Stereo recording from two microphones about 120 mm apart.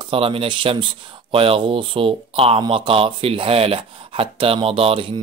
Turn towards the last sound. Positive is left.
turn(degrees=-50)  # may be behind; listen again after turning